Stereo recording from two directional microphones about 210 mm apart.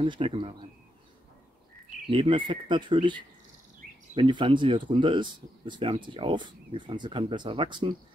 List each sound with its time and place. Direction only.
0.0 s speech: 25° right (ahead or behind)
2.0 s speech: 25° right (ahead or behind)